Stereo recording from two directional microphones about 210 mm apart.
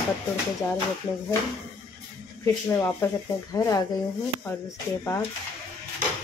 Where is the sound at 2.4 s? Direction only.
15° left (ahead or behind).